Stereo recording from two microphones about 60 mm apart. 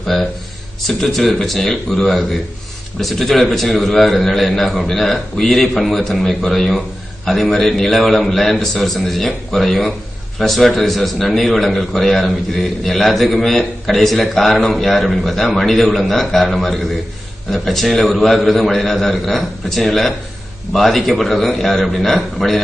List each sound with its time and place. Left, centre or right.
0.1 s a man's voice: centre